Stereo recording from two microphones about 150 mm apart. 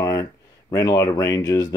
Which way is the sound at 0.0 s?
25° left (ahead or behind).